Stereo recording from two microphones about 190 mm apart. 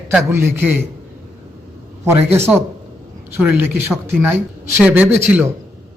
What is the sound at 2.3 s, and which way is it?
A man's voice, 10° right (ahead or behind).